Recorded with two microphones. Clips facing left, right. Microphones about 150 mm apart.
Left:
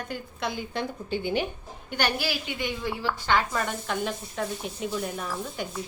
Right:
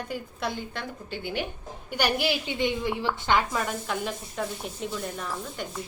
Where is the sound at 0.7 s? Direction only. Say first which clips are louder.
Left 6 dB; 15° left (ahead or behind).